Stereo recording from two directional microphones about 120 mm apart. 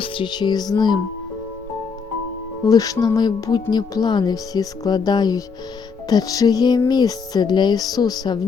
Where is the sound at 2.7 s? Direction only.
30° left (ahead or behind).